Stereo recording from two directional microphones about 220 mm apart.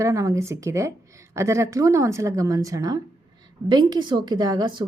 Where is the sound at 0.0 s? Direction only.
15° right (ahead or behind).